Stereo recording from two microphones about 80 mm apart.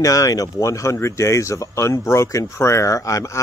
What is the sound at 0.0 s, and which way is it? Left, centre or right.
Speech, left.